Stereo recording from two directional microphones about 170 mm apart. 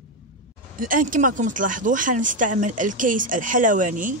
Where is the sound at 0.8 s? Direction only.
50° right (ahead or behind).